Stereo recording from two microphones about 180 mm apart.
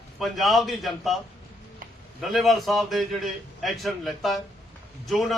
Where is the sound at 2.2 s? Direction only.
Centre (ahead or behind).